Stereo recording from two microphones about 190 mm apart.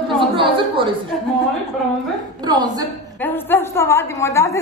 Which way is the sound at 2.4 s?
20° right (ahead or behind).